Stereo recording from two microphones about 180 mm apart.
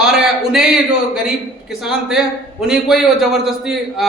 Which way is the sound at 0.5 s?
5° right (ahead or behind).